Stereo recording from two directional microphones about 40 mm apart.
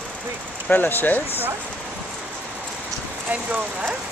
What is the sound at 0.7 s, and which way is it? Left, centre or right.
Speech, left.